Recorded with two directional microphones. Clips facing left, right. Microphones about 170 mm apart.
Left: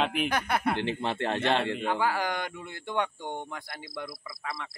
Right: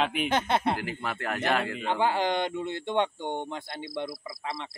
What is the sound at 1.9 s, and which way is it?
Speech, 25° right (ahead or behind).